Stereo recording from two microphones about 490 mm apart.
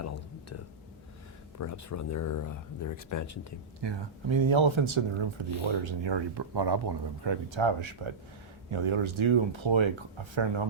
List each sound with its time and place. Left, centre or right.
1.5 s speech: left
3.8 s speech: right